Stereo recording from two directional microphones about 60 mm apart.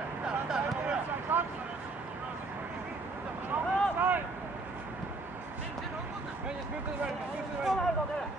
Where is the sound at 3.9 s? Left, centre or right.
Right.